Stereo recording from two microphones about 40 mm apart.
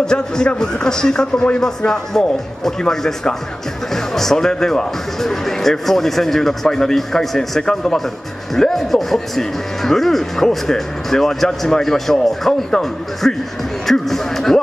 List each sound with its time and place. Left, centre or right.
0.0 s a man's voice: centre